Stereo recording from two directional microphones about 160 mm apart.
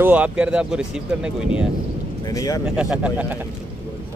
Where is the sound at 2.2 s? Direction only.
20° left (ahead or behind).